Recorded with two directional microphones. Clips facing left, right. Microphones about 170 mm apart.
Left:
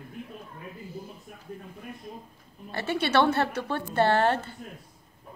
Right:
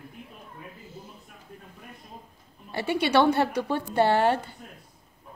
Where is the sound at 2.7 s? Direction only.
15° right (ahead or behind).